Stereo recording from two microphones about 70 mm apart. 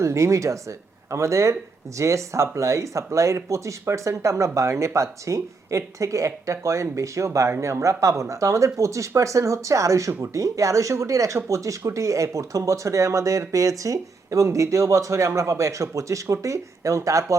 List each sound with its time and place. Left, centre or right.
0.0 s speech: right